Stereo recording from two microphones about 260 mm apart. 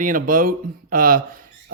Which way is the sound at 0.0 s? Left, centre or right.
Right.